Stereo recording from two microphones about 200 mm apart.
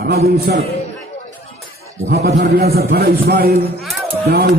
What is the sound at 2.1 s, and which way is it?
A man's voice, 50° right (ahead or behind).